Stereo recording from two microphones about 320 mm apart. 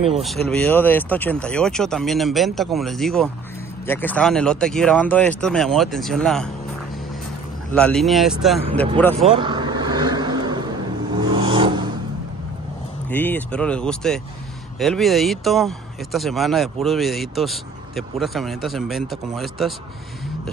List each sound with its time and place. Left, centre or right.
0.1 s speech: centre
7.7 s speech: centre
9.3 s vehicle: centre
13.1 s speech: centre